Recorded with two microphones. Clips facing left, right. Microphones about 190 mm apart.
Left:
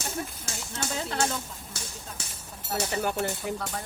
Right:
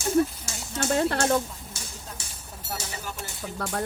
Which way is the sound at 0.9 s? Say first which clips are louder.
Right 7 dB; 60° right (ahead or behind).